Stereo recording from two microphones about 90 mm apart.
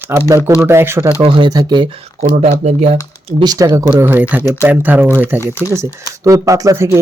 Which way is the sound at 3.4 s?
40° right (ahead or behind).